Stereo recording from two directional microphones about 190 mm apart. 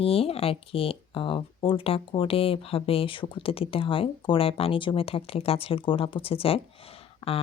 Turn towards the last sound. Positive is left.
turn(degrees=30)  # may be behind; listen again after turning